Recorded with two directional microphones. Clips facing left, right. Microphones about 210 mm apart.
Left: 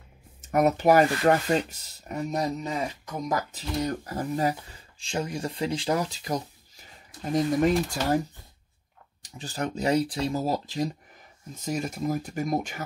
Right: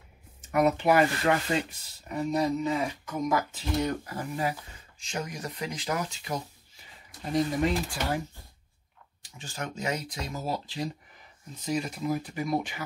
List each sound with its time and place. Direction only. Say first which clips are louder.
0.5 s speech: left 3 dB; 45° left (ahead or behind)
7.6 s speech: left 4 dB; 40° left (ahead or behind)
9.2 s speech: left 6 dB; 35° left (ahead or behind)